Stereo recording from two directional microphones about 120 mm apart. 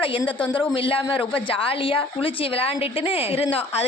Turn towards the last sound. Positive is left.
turn(degrees=50)  # may be behind; listen again after turning